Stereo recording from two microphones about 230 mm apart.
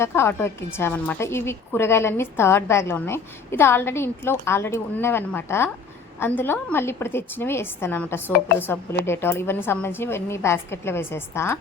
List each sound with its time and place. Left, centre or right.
0.0 s a woman's voice: centre